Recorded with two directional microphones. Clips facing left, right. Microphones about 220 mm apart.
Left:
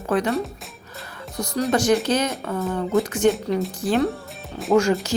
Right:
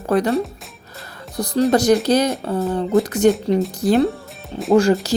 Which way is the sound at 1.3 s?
35° right (ahead or behind).